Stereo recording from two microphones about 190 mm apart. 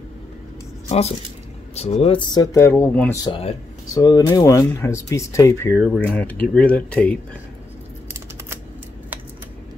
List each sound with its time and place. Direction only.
0.8 s speech: 35° left (ahead or behind)
2.3 s speech: 15° left (ahead or behind)
3.3 s speech: 25° left (ahead or behind); by 7.2 s 5° left (ahead or behind)